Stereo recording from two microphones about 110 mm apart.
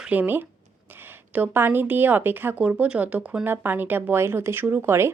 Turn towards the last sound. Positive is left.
turn(degrees=-25)  # may be behind; listen again after turning